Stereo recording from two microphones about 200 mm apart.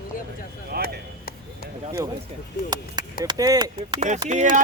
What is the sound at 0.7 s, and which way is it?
Speech, 50° right (ahead or behind).